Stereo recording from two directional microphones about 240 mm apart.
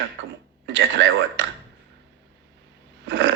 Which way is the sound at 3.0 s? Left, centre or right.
Right.